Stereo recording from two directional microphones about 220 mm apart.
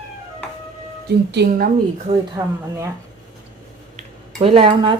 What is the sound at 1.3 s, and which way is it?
Speech, 45° right (ahead or behind).